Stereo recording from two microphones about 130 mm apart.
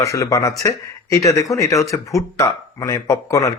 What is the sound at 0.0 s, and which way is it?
Speech, 25° left (ahead or behind).